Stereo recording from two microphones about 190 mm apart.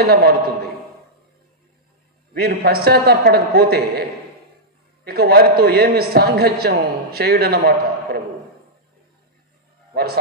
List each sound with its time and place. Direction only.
0.0 s a man's voice: 55° right (ahead or behind)
2.3 s a man's voice: 55° right (ahead or behind)
5.0 s a man's voice: 55° right (ahead or behind)